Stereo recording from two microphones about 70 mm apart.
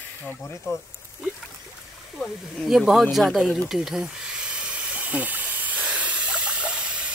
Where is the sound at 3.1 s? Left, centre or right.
Centre.